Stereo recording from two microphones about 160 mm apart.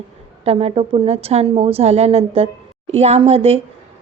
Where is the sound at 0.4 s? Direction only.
40° right (ahead or behind).